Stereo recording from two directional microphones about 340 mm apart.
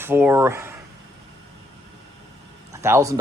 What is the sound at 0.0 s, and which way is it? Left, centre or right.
Speech, centre.